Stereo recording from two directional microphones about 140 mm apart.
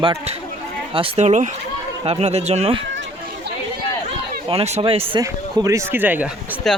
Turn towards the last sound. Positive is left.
turn(degrees=-15)  # may be behind; listen again after turning